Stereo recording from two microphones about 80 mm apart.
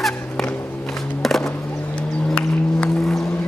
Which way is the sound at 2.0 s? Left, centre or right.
Centre.